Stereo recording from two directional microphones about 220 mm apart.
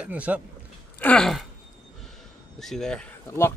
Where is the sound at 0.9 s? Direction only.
5° left (ahead or behind).